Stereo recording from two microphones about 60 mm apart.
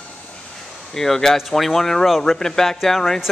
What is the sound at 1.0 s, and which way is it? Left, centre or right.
A man's voice, centre.